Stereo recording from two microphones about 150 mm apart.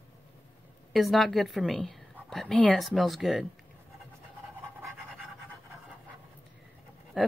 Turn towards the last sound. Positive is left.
turn(degrees=0)  # may be behind; listen again after turning